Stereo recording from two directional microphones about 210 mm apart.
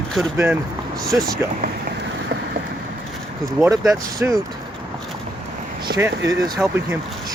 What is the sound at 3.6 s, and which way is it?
Speech, 10° right (ahead or behind).